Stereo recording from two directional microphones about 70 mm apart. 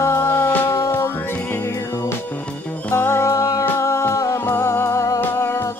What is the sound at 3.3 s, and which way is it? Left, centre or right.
Music, left.